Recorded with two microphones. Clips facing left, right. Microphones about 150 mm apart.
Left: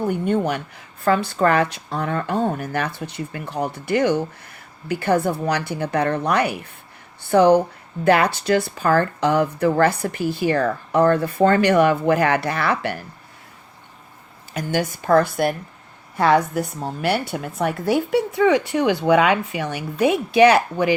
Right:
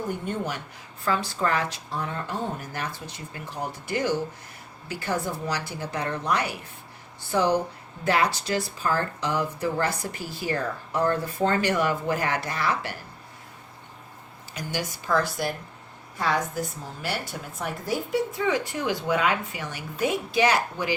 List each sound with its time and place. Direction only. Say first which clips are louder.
0.3 s speech: left 9 dB; 65° left (ahead or behind)
14.5 s a woman's voice: left 9 dB; 55° left (ahead or behind)